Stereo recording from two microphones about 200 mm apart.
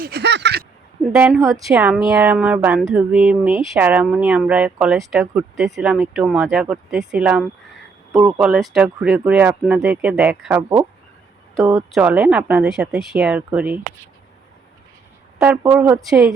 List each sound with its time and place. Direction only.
0.0 s a sound: 55° right (ahead or behind)
1.1 s speech: 10° right (ahead or behind)
15.4 s speech: 10° right (ahead or behind)